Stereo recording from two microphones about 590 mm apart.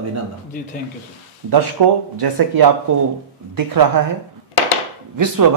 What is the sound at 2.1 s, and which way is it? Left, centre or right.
A man's voice, right.